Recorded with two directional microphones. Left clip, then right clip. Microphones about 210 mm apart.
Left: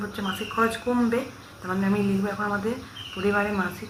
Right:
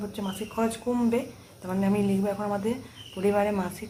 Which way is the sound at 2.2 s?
15° right (ahead or behind).